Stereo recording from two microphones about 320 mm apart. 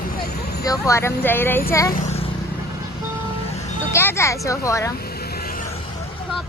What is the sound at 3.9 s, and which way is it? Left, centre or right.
Speech, centre.